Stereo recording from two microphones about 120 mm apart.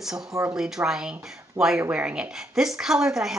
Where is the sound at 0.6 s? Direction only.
5° right (ahead or behind).